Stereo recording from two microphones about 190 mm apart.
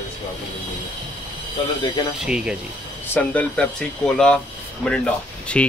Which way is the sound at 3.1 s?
5° left (ahead or behind).